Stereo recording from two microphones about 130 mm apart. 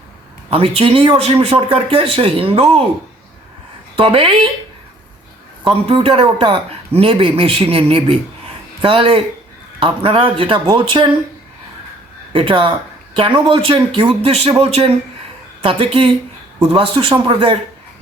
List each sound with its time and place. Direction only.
0.5 s speech: 45° right (ahead or behind)
3.9 s speech: 45° right (ahead or behind)
5.9 s speech: 45° right (ahead or behind)
12.3 s speech: 40° right (ahead or behind)